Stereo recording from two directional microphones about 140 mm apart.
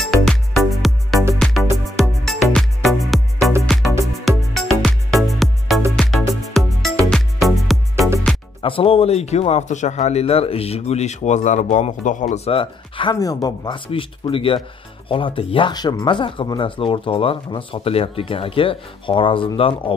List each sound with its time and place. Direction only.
0.0 s music: centre (ahead or behind)
8.6 s a man's voice: 40° left (ahead or behind); by 12.4 s 65° left (ahead or behind)
12.4 s speech: 40° left (ahead or behind)
13.9 s speech: 40° left (ahead or behind)